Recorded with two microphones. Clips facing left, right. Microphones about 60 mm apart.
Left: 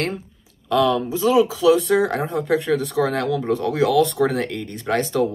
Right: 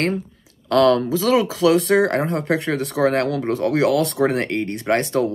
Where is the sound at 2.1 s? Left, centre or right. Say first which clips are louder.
Right 1 dB; right.